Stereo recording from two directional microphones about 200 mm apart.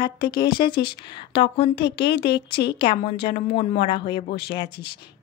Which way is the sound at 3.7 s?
55° left (ahead or behind).